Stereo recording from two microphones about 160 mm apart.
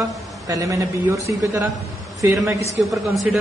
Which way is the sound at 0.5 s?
20° right (ahead or behind).